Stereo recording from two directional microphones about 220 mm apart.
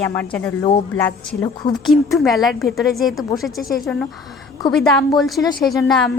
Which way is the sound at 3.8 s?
5° left (ahead or behind).